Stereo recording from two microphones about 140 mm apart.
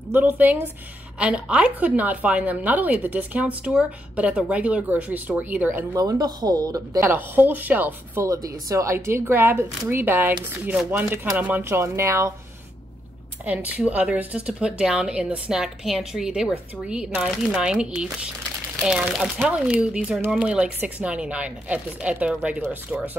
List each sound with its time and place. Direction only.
0.1 s a woman's voice: 10° right (ahead or behind)
5.9 s speech: 25° right (ahead or behind)
7.1 s a woman's voice: 15° right (ahead or behind)
13.5 s a woman's voice: 10° right (ahead or behind)